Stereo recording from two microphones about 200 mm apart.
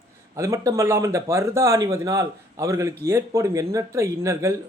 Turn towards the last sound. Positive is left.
turn(degrees=-15)  # may be behind; listen again after turning